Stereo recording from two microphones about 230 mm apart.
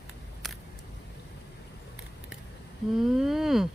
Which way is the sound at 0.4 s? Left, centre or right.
Centre.